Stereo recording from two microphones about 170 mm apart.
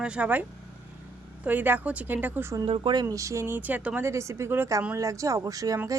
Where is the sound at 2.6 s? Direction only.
30° right (ahead or behind).